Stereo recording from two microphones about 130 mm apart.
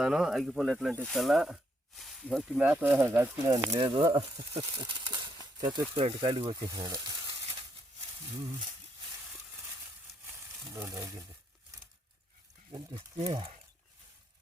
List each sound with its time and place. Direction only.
0.0 s speech: 5° right (ahead or behind)
2.6 s speech: 15° right (ahead or behind)
3.8 s speech: 40° right (ahead or behind)
10.8 s speech: 25° right (ahead or behind)